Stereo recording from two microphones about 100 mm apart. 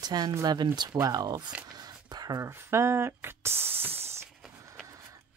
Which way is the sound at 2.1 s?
40° right (ahead or behind).